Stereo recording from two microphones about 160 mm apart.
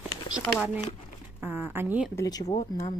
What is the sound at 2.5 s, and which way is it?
Speech, 40° left (ahead or behind).